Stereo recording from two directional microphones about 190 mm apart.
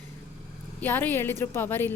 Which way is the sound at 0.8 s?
10° left (ahead or behind).